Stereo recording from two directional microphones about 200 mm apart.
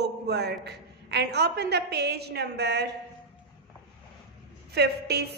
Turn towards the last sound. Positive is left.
turn(degrees=-55)  # may be behind; listen again after turning